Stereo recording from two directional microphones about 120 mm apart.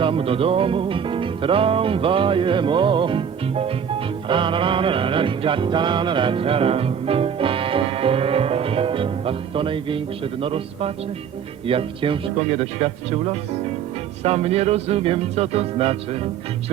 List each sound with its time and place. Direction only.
0.0 s music: 50° right (ahead or behind)
14.3 s music: 60° right (ahead or behind)